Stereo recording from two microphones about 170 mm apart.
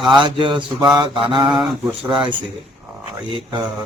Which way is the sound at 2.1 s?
30° right (ahead or behind).